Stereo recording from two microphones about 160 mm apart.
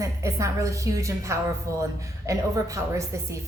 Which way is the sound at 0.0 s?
20° right (ahead or behind).